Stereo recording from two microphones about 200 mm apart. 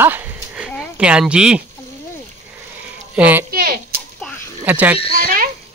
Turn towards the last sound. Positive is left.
turn(degrees=-45)  # may be behind; listen again after turning